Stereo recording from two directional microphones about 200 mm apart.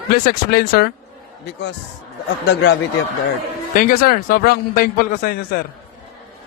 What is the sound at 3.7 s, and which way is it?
A man's voice, 45° left (ahead or behind).